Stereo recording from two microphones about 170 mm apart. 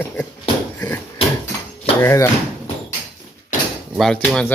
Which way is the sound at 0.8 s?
20° left (ahead or behind).